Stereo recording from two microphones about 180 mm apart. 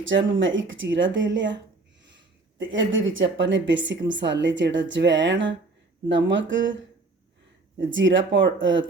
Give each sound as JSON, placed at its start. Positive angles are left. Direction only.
{"t": 0.0, "sound": "a woman's voice", "side_deg": -90}
{"t": 7.8, "sound": "speech", "side_deg": -90}